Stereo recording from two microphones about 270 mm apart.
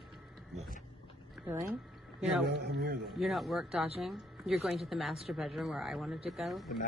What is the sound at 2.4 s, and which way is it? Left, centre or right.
Speech, right.